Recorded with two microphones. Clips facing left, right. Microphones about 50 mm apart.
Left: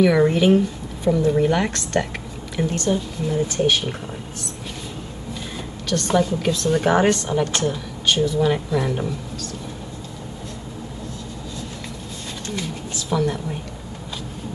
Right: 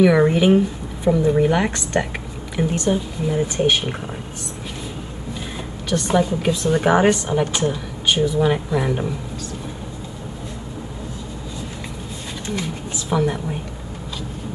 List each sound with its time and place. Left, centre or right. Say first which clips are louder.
0.0 s speech: right 1 dB; centre
5.9 s speech: right 1 dB; centre
12.4 s speech: right 3 dB; centre